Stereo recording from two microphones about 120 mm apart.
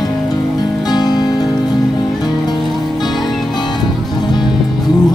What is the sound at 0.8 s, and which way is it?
Music, 35° left (ahead or behind).